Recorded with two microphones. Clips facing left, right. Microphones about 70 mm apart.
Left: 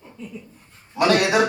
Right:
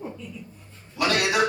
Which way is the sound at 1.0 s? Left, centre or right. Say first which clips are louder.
Left 5 dB; left.